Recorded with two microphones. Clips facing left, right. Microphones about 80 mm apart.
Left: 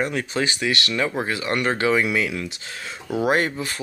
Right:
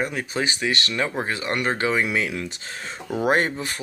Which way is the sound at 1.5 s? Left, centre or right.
Centre.